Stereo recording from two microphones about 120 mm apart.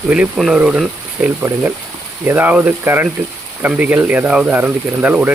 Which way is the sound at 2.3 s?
15° right (ahead or behind).